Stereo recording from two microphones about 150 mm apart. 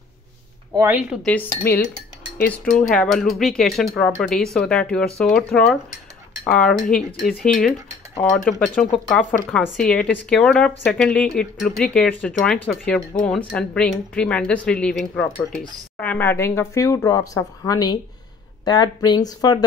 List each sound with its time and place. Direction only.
0.7 s speech: 15° right (ahead or behind)
1.1 s speech: 5° left (ahead or behind); by 19.6 s 25° left (ahead or behind)